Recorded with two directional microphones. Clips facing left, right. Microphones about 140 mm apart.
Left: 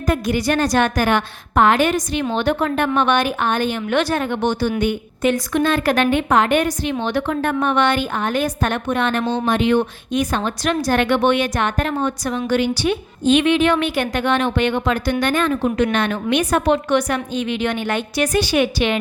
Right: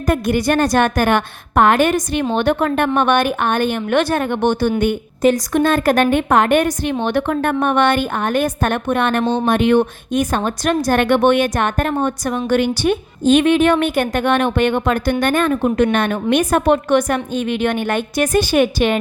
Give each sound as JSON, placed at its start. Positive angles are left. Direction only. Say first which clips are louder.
{"t": 0.0, "sound": "a woman's voice", "louder": "right 3 dB", "side_deg": -55}